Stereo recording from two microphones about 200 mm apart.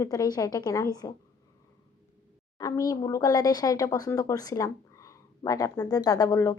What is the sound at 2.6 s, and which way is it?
A woman's voice, 15° left (ahead or behind).